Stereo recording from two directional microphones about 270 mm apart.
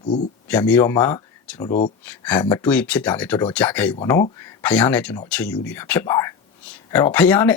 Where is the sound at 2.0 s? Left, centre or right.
Centre.